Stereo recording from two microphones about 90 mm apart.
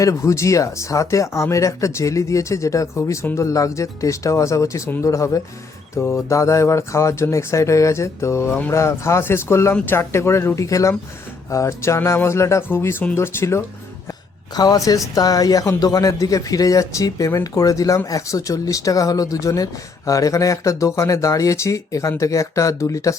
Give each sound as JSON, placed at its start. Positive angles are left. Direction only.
{"t": 0.0, "sound": "speech", "side_deg": 35}
{"t": 14.5, "sound": "speech", "side_deg": 45}